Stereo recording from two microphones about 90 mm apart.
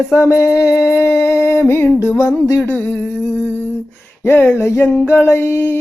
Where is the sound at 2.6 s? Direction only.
20° left (ahead or behind).